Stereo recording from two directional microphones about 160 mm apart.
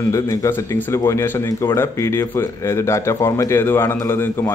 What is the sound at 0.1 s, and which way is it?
A man's voice, 20° left (ahead or behind).